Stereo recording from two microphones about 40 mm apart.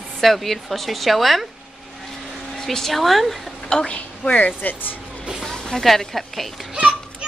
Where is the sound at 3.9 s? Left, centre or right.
Left.